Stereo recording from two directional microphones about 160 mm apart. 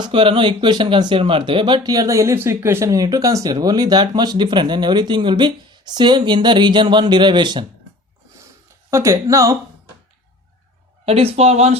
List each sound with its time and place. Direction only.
0.0 s speech: 30° right (ahead or behind)
8.9 s speech: 20° right (ahead or behind)
11.0 s speech: 40° right (ahead or behind)